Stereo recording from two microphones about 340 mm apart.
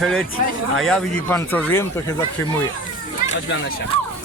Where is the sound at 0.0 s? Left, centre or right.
Centre.